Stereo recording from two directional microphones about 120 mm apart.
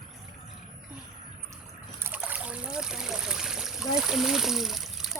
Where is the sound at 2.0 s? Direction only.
15° right (ahead or behind).